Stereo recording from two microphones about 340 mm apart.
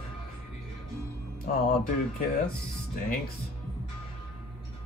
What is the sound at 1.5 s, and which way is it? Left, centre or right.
Speech, left.